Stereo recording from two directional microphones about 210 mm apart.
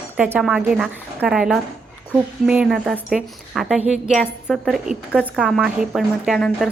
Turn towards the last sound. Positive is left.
turn(degrees=0)  # may be behind; listen again after turning